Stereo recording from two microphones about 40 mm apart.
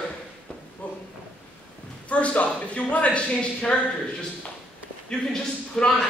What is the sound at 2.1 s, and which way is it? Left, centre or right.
Speech, left.